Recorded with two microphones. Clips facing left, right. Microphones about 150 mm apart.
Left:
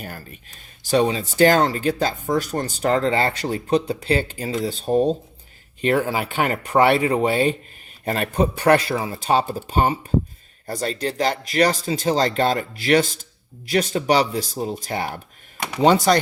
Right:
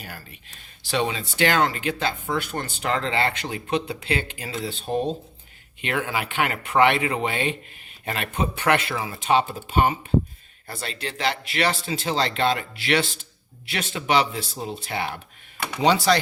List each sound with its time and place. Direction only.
0.0 s speech: 45° left (ahead or behind)